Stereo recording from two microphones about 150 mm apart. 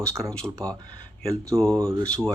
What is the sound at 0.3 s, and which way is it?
Speech, 5° left (ahead or behind).